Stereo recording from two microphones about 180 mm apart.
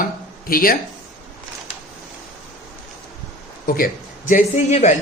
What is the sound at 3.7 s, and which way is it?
Speech, 50° left (ahead or behind).